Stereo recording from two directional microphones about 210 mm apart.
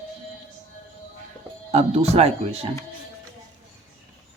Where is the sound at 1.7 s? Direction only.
30° right (ahead or behind).